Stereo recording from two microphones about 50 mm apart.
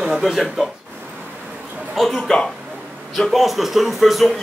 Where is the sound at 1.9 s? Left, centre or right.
Centre.